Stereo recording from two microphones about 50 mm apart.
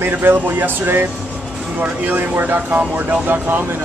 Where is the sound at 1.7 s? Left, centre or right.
Right.